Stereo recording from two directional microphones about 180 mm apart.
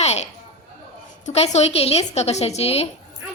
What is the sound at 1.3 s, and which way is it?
A woman's voice, 35° left (ahead or behind).